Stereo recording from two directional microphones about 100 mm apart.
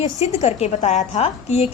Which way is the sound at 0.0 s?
90° left.